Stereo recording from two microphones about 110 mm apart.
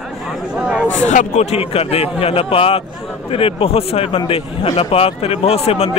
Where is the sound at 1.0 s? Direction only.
85° left.